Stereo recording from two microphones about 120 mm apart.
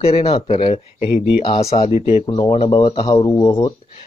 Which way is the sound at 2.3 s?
50° left (ahead or behind).